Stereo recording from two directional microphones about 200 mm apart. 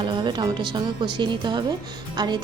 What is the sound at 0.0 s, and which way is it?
Speech, 20° right (ahead or behind).